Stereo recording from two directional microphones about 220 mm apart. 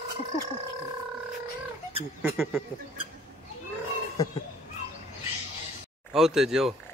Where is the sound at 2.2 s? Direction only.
5° right (ahead or behind).